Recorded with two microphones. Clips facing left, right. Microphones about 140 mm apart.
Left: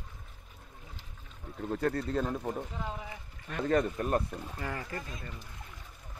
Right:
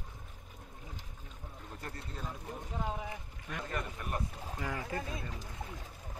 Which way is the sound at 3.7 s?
80° left.